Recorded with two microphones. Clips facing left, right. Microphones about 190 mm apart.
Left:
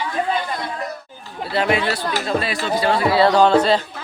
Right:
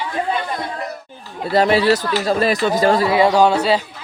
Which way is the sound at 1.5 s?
35° right (ahead or behind).